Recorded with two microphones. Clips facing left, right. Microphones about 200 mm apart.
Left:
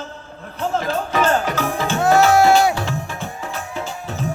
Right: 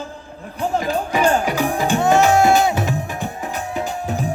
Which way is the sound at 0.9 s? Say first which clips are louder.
Right 1 dB; 15° right (ahead or behind).